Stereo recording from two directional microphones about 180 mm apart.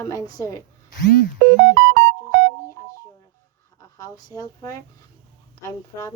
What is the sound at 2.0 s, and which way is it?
Music, 90° right.